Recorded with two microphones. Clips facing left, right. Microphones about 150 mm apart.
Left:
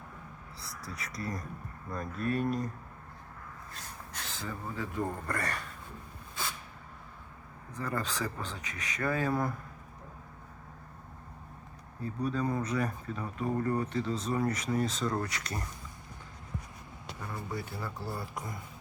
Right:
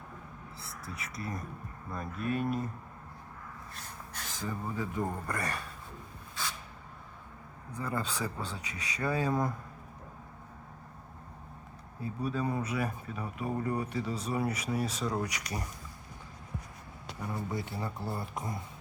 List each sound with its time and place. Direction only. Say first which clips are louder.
1.2 s speech: left 2 dB; 5° right (ahead or behind)
4.4 s speech: right 3 dB; 15° right (ahead or behind)
7.7 s speech: even; 10° right (ahead or behind)
12.0 s speech: left 1 dB; 5° right (ahead or behind)
17.2 s speech: right 3 dB; 20° right (ahead or behind)